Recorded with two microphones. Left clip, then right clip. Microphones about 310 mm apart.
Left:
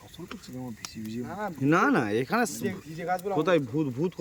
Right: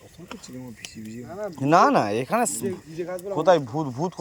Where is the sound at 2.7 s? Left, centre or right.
Left.